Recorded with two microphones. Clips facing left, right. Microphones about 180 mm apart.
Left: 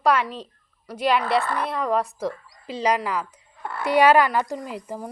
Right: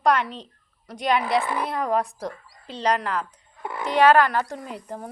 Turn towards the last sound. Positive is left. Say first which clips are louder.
# left 2 dB
turn(degrees=5)  # may be behind; listen again after turning